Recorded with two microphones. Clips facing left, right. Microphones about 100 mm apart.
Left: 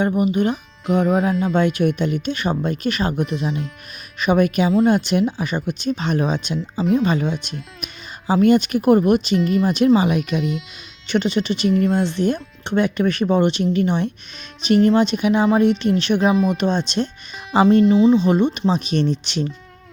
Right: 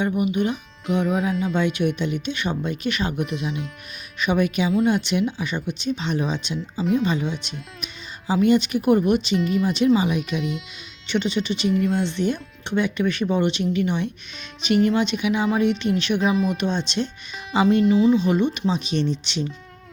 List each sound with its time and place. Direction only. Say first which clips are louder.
0.0 s a woman's voice: left 4 dB; 40° left (ahead or behind)
11.1 s a woman's voice: left 4 dB; 45° left (ahead or behind)
16.3 s speech: left 4 dB; centre (ahead or behind)
16.6 s a woman's voice: left 4 dB; 40° left (ahead or behind)
17.8 s speech: left 3 dB; 25° left (ahead or behind)
18.7 s speech: left 4 dB; 45° left (ahead or behind)